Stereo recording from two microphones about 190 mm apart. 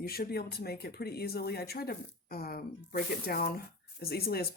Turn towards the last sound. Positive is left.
turn(degrees=55)  # may be behind; listen again after turning